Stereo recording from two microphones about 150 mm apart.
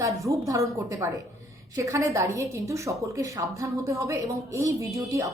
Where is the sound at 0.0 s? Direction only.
20° right (ahead or behind).